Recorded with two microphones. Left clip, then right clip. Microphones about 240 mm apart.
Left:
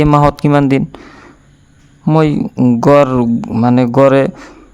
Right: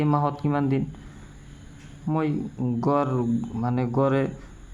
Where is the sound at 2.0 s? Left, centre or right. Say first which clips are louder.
Left 15 dB; left.